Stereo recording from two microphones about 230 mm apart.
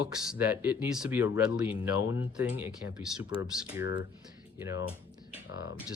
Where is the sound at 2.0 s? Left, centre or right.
Left.